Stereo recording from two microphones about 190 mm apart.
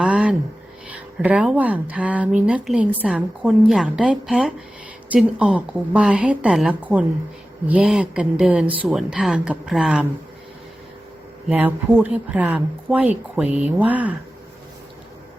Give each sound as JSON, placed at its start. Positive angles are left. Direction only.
{"t": 0.0, "sound": "a sound", "side_deg": -5}
{"t": 0.9, "sound": "speech", "side_deg": -5}
{"t": 11.4, "sound": "speech", "side_deg": -5}